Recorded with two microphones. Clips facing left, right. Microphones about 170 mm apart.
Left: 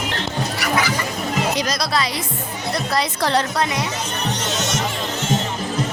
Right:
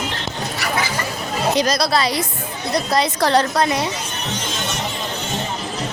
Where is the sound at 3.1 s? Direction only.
40° right (ahead or behind).